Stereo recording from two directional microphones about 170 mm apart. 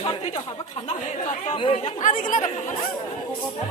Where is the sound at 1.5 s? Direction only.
30° left (ahead or behind).